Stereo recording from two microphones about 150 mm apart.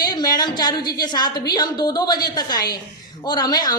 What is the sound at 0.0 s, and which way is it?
Speech, 25° left (ahead or behind).